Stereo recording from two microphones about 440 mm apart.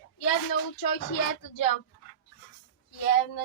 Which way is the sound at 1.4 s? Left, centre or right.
Left.